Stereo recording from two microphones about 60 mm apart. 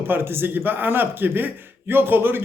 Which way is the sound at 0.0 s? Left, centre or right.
Right.